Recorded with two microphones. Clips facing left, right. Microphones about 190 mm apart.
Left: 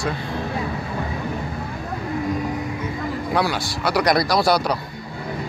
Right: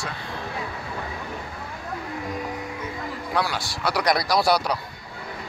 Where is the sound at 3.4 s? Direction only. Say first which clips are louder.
Left 4 dB; centre (ahead or behind).